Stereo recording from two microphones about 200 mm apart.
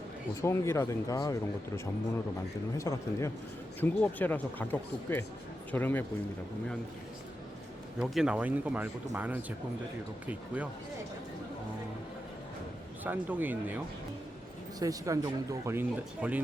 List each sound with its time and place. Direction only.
0.4 s speech: 15° left (ahead or behind)
7.9 s speech: centre (ahead or behind)
13.1 s speech: 10° right (ahead or behind)